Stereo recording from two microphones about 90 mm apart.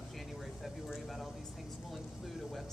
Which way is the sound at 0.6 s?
Centre (ahead or behind).